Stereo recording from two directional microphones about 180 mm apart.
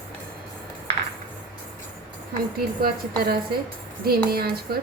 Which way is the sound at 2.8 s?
55° right (ahead or behind).